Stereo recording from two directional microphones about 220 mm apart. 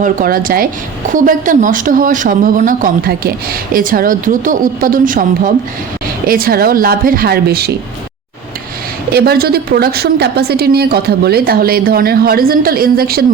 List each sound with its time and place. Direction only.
0.0 s speech: 40° right (ahead or behind)
6.2 s speech: 40° right (ahead or behind)
9.1 s a woman's voice: 45° right (ahead or behind)